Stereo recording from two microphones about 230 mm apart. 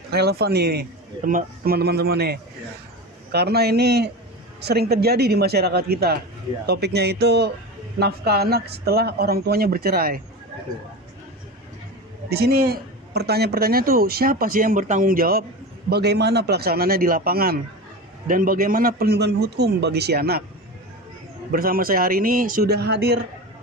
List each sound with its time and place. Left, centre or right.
0.1 s a man's voice: right
12.3 s a man's voice: right
21.5 s a man's voice: right